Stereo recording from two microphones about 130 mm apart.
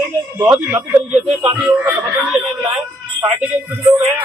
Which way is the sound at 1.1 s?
55° right (ahead or behind).